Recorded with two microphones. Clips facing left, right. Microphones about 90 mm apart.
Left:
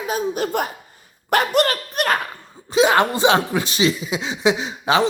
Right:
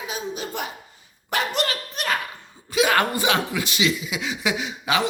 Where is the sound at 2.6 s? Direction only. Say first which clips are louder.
Left 4 dB; 25° left (ahead or behind).